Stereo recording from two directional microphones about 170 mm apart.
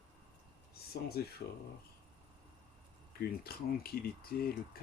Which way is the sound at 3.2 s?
65° left (ahead or behind).